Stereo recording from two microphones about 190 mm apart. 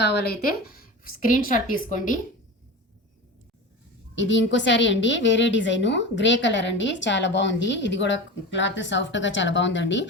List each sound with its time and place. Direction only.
0.0 s a woman's voice: 60° left (ahead or behind); by 2.1 s 45° left (ahead or behind)
4.1 s a woman's voice: 75° left (ahead or behind)